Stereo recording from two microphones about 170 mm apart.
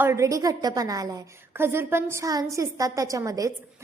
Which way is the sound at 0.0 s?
15° right (ahead or behind).